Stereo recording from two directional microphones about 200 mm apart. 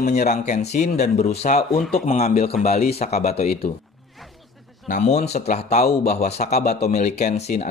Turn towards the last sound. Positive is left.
turn(degrees=35)  # may be behind; listen again after turning